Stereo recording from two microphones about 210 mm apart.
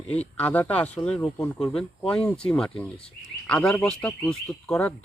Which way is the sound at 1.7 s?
25° left (ahead or behind).